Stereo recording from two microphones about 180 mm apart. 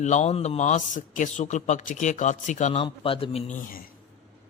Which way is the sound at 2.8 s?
30° left (ahead or behind).